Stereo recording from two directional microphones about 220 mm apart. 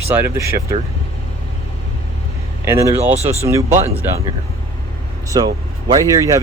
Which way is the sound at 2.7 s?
10° right (ahead or behind).